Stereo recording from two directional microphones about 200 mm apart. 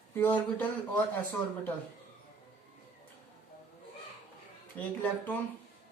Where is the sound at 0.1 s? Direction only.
10° left (ahead or behind).